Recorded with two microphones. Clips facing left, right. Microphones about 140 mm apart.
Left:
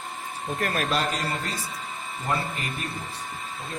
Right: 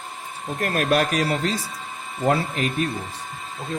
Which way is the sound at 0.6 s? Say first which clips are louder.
Right 6 dB; 50° right (ahead or behind).